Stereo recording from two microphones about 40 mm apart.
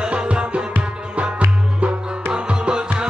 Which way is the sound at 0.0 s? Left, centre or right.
Right.